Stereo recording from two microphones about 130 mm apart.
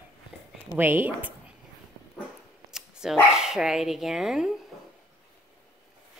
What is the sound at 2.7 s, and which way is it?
Dog, 5° right (ahead or behind).